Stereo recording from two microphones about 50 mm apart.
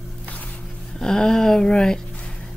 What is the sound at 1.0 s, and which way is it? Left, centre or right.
Speech, centre.